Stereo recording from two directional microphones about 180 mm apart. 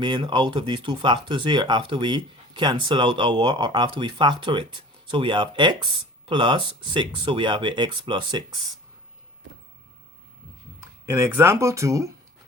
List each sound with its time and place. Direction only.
0.0 s speech: 25° right (ahead or behind)
11.0 s speech: 15° right (ahead or behind)